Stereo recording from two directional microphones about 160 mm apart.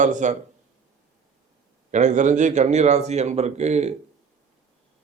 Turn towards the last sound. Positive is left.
turn(degrees=-45)  # may be behind; listen again after turning